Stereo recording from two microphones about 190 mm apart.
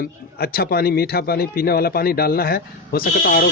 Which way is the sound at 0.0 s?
55° left (ahead or behind).